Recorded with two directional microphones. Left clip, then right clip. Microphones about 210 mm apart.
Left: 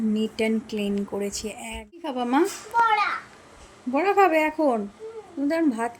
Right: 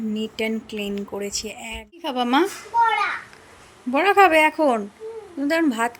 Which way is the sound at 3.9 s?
5° right (ahead or behind).